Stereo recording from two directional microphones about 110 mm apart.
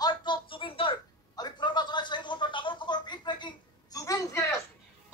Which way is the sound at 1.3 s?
40° left (ahead or behind).